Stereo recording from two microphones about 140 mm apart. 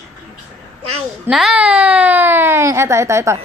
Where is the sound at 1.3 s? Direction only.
5° right (ahead or behind); by 3.4 s 20° right (ahead or behind).